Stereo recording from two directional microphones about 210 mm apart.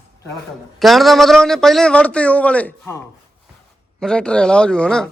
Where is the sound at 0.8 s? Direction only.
Centre (ahead or behind).